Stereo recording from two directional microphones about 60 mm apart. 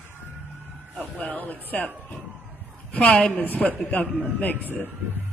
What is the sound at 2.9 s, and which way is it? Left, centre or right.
Speech, centre.